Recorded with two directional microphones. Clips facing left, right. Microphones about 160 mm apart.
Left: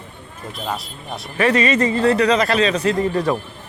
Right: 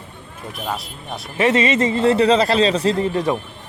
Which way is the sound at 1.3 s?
25° right (ahead or behind).